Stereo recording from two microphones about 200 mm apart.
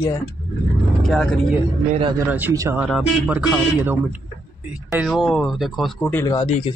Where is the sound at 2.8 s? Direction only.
5° right (ahead or behind).